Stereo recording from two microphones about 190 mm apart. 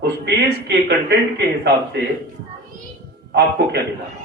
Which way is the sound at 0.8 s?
60° right (ahead or behind).